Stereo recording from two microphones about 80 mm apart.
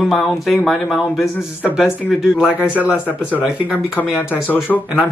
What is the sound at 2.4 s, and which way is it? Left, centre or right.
Speech, centre.